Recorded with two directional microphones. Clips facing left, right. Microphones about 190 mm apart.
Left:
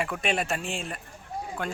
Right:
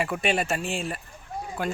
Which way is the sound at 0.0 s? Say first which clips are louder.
Right 3 dB; centre (ahead or behind).